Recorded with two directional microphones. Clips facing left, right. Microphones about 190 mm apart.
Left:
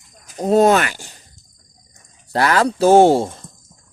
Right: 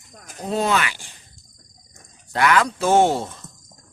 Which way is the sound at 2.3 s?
35° left (ahead or behind).